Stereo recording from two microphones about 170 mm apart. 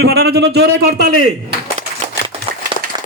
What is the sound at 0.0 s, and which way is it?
A man's voice, 70° right (ahead or behind).